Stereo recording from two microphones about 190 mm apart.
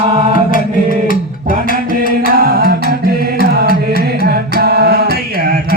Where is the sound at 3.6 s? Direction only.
50° left (ahead or behind).